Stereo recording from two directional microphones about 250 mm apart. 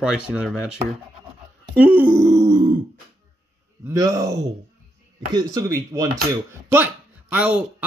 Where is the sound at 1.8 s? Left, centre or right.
Centre.